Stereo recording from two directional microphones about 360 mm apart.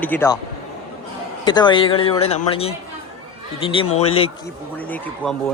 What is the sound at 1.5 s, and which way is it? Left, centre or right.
Speech, centre.